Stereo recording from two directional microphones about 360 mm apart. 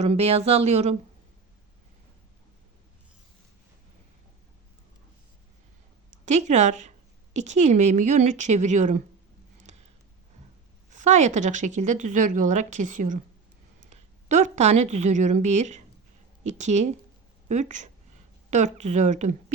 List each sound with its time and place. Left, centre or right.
0.0 s speech: centre
6.2 s speech: centre
10.9 s speech: centre
13.9 s a sound: centre
14.9 s speech: centre
18.9 s speech: centre